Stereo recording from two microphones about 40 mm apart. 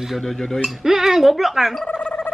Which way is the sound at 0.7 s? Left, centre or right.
Centre.